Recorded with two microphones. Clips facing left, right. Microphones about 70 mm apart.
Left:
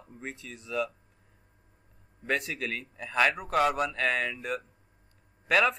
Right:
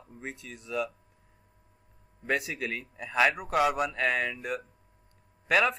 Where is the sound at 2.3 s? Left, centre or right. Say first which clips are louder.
Even; centre.